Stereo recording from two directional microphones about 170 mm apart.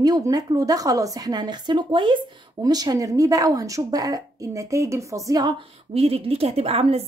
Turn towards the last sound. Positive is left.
turn(degrees=-35)  # may be behind; listen again after turning